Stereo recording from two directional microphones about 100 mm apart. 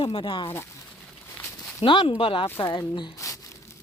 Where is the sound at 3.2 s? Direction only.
35° left (ahead or behind).